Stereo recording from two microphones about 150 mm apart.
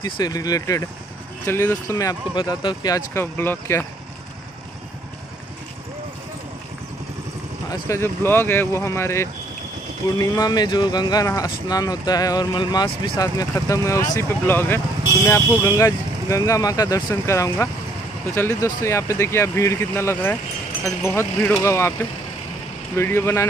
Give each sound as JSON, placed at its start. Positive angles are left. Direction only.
{"t": 0.0, "sound": "speech", "side_deg": 25}
{"t": 3.2, "sound": "speech", "side_deg": 15}
{"t": 7.7, "sound": "speech", "side_deg": 20}
{"t": 22.9, "sound": "speech", "side_deg": 15}